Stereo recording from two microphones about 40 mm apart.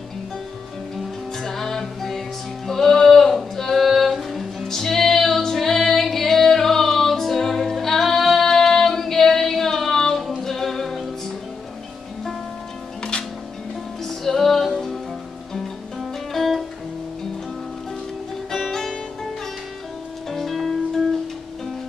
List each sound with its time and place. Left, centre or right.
1.4 s music: centre
14.0 s music: centre
16.0 s music: centre
18.5 s music: centre
20.2 s music: centre